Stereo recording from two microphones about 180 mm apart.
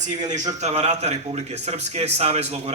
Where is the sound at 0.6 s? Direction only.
35° right (ahead or behind).